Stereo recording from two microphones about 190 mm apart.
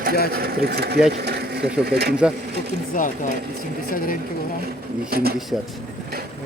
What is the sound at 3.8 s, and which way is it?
Speech, 45° left (ahead or behind).